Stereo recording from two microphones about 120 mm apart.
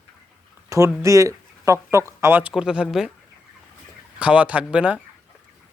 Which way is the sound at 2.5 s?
5° right (ahead or behind).